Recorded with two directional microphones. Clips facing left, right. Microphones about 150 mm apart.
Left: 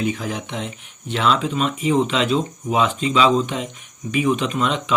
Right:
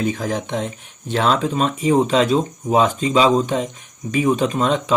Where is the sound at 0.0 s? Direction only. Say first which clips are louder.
Right 2 dB; 45° right (ahead or behind).